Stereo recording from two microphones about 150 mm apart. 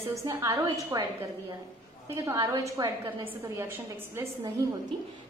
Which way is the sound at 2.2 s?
25° right (ahead or behind).